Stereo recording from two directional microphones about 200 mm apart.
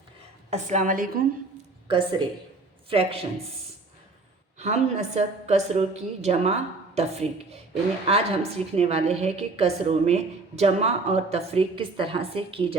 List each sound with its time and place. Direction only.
0.5 s a woman's voice: 35° right (ahead or behind)
1.9 s speech: 25° right (ahead or behind)
4.5 s a woman's voice: 35° right (ahead or behind)